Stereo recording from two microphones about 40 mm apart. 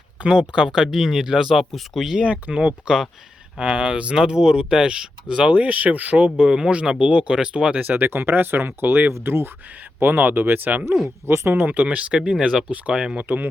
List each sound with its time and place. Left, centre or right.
0.2 s speech: right
0.9 s speech: centre
1.5 s speech: centre
2.2 s speech: right
5.5 s speech: right
7.8 s speech: right
8.0 s speech: right
10.0 s speech: right
11.3 s speech: right
11.6 s speech: right
13.2 s speech: right